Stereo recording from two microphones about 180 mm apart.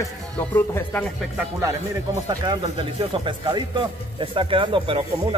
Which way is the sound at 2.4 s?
25° right (ahead or behind).